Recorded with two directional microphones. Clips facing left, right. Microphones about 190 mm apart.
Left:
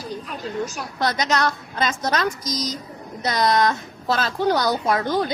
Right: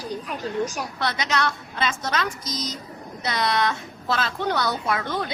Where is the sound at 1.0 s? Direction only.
40° left (ahead or behind).